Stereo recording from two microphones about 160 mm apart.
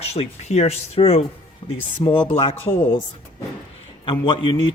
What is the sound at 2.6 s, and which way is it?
Speech, 15° left (ahead or behind).